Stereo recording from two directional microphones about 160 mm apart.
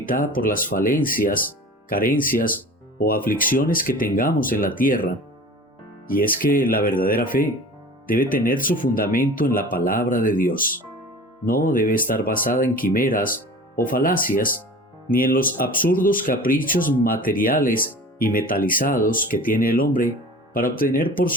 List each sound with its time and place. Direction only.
0.0 s speech: 60° left (ahead or behind)
6.1 s speech: 60° left (ahead or behind)